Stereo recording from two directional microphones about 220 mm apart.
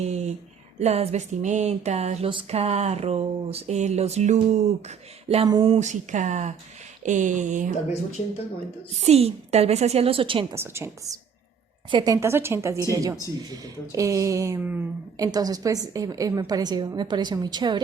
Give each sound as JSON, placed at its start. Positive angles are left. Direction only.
{"t": 0.0, "sound": "a sound", "side_deg": -30}
{"t": 0.8, "sound": "speech", "side_deg": -30}
{"t": 9.0, "sound": "speech", "side_deg": -30}
{"t": 10.5, "sound": "speech", "side_deg": -10}